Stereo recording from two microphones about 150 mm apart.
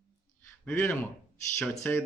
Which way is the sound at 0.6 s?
10° left (ahead or behind).